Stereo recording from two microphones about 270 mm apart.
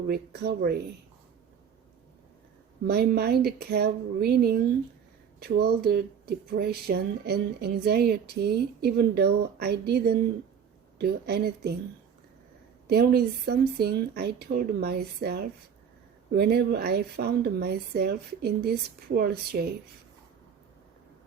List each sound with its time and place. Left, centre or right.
0.1 s speech: right
2.8 s speech: right
12.9 s speech: right